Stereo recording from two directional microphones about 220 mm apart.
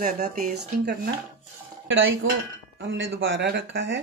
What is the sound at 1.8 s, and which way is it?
Speech, 60° right (ahead or behind).